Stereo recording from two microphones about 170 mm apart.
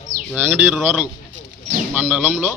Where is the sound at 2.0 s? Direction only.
10° right (ahead or behind).